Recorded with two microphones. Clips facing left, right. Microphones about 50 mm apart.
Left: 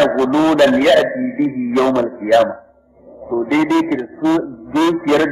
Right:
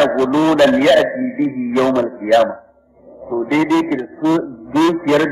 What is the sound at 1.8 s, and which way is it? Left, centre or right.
Speech, centre.